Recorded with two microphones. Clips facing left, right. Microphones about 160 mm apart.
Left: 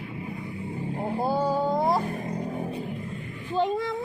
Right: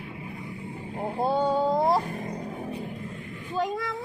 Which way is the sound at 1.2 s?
Centre (ahead or behind).